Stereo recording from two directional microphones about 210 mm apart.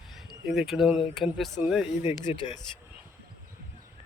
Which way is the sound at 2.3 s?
30° left (ahead or behind).